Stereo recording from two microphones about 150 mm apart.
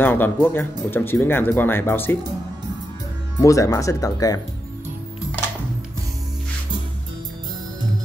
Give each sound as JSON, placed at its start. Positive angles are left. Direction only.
{"t": 0.0, "sound": "speech", "side_deg": 15}
{"t": 3.3, "sound": "speech", "side_deg": 20}